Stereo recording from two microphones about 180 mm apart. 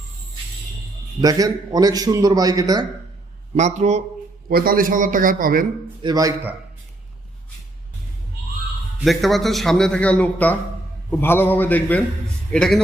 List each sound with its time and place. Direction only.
1.2 s a man's voice: 20° right (ahead or behind)
3.5 s a man's voice: 40° right (ahead or behind)
4.4 s a man's voice: 55° right (ahead or behind)
6.0 s a man's voice: 20° right (ahead or behind)
9.0 s a man's voice: centre (ahead or behind)